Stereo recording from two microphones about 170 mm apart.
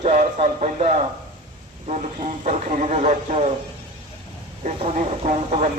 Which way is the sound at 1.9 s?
40° right (ahead or behind).